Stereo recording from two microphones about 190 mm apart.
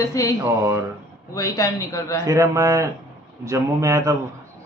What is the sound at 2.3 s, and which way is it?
A man's voice, 15° right (ahead or behind).